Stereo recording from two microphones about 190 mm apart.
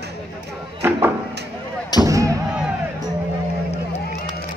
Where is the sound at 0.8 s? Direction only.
10° right (ahead or behind).